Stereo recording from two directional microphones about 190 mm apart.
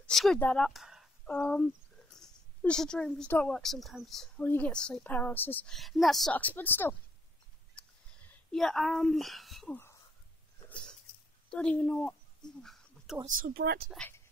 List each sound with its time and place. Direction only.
0.0 s a woman's voice: centre (ahead or behind)
7.8 s a sound: 5° left (ahead or behind)
8.3 s speech: 5° left (ahead or behind)
10.7 s a sound: 5° left (ahead or behind)
13.4 s speech: 50° right (ahead or behind)
13.8 s a woman's voice: 5° left (ahead or behind)